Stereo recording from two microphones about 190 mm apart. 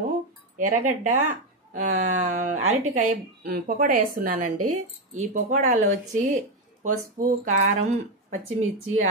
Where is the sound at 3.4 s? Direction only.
50° right (ahead or behind).